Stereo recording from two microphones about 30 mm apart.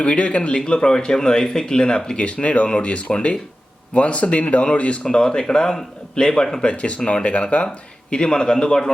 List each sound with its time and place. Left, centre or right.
0.0 s speech: left
0.6 s speech: left
2.1 s speech: left
5.0 s speech: left
6.6 s speech: left
8.1 s speech: left